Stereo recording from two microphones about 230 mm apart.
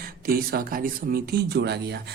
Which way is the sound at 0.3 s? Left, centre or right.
Right.